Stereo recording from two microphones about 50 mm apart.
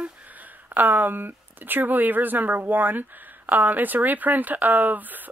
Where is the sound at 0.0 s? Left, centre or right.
Right.